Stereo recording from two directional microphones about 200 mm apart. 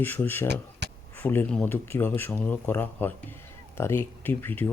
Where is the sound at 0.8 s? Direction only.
60° right (ahead or behind).